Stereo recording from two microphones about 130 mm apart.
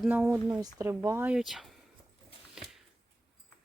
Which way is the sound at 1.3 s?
5° right (ahead or behind).